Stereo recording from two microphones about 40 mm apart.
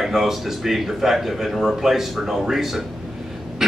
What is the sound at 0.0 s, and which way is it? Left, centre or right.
A man's voice, centre.